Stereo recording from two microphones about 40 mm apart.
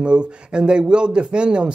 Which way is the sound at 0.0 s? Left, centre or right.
Right.